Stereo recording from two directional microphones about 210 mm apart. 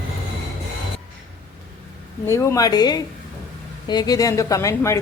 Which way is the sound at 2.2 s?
15° left (ahead or behind).